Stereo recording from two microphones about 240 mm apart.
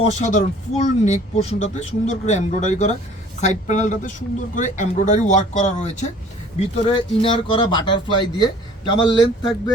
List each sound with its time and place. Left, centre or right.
0.0 s speech: left